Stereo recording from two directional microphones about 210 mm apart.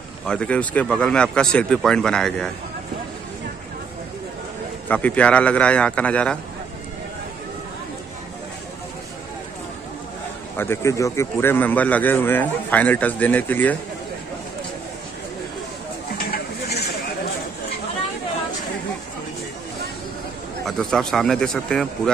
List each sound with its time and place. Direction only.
0.3 s speech: 5° left (ahead or behind)
4.8 s speech: 10° left (ahead or behind)
10.6 s speech: 10° left (ahead or behind)
16.3 s a sound: 50° left (ahead or behind)
20.6 s speech: centre (ahead or behind)